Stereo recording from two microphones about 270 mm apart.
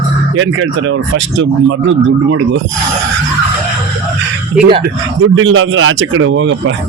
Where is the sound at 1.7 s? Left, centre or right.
Right.